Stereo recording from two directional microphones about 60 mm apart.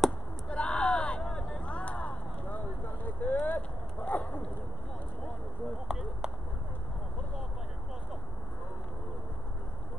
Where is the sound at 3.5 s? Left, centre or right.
Left.